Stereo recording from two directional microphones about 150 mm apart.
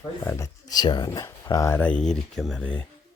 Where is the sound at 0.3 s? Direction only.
20° left (ahead or behind).